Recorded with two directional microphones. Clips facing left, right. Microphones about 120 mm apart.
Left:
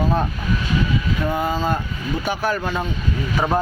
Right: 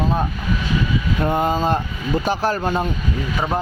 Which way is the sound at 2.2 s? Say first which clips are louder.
Right 1 dB; 35° right (ahead or behind).